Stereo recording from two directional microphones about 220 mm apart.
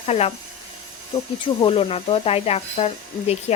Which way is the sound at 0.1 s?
30° left (ahead or behind).